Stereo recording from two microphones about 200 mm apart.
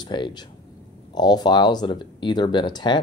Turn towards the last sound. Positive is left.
turn(degrees=20)  # may be behind; listen again after turning